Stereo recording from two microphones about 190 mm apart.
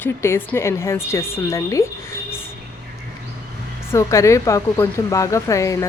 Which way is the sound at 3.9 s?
15° left (ahead or behind).